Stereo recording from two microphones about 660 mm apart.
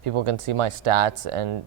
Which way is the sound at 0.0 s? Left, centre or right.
Right.